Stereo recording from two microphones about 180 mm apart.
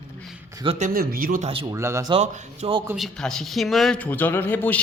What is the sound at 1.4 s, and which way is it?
Speech, 30° right (ahead or behind).